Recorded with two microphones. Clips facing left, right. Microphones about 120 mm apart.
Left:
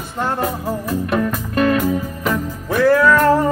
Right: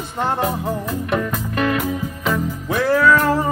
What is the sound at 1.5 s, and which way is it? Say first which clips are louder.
Music: left 4 dB; 40° left (ahead or behind).